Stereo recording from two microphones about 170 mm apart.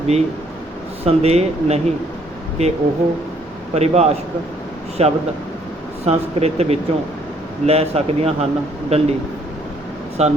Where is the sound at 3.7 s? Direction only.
40° right (ahead or behind).